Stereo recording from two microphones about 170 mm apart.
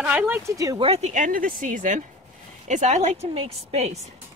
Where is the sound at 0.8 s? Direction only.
40° right (ahead or behind).